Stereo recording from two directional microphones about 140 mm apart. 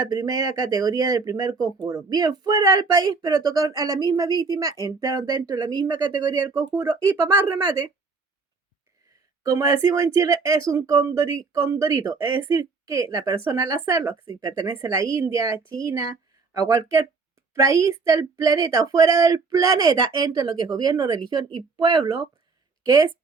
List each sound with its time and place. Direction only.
0.0 s speech: 25° right (ahead or behind)
9.4 s speech: 25° right (ahead or behind)